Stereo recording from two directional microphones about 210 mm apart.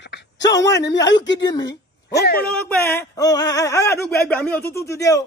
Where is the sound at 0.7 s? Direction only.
55° left (ahead or behind).